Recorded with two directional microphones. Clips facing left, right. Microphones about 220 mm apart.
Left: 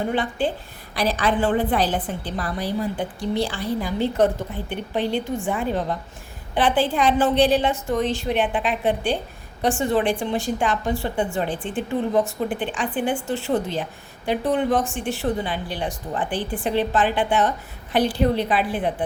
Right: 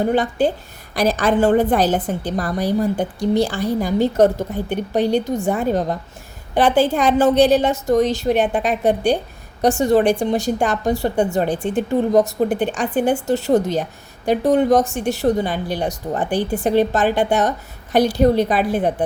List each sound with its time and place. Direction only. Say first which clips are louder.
0.1 s a woman's voice: right 6 dB; 40° right (ahead or behind)